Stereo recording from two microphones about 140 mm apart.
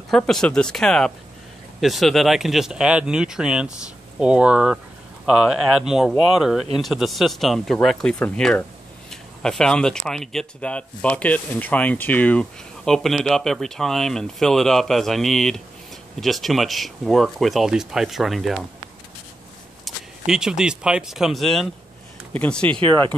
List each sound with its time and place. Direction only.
0.1 s speech: 5° left (ahead or behind)
19.8 s speech: 5° right (ahead or behind)
22.7 s speech: 35° right (ahead or behind)